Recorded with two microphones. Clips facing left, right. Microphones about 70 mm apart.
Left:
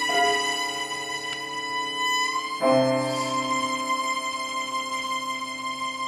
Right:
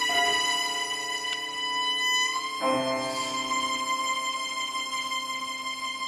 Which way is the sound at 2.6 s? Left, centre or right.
Centre.